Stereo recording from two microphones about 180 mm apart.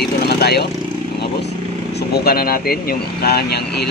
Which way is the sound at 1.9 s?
60° left (ahead or behind).